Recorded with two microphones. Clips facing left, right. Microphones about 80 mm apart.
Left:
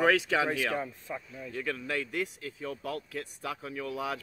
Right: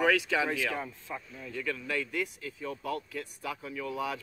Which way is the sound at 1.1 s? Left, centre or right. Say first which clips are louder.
Even; centre.